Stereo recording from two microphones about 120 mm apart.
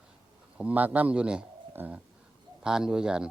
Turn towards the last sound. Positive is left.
turn(degrees=-5)  # may be behind; listen again after turning